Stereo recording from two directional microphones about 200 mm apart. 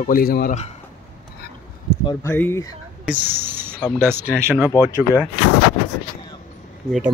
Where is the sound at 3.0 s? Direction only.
10° right (ahead or behind).